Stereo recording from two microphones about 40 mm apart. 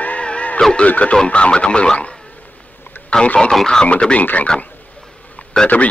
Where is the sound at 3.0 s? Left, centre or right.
Left.